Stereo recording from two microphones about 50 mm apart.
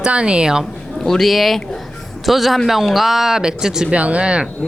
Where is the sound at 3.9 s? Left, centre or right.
Right.